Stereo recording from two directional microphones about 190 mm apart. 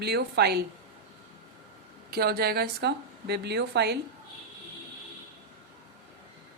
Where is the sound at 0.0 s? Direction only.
60° right (ahead or behind).